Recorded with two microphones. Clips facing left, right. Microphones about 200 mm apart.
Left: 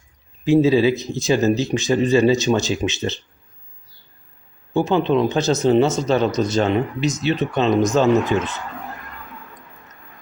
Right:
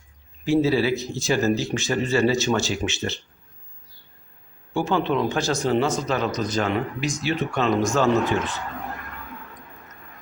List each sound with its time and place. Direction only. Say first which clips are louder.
0.4 s a man's voice: left 5 dB; 20° left (ahead or behind)
4.7 s a man's voice: left 5 dB; 20° left (ahead or behind)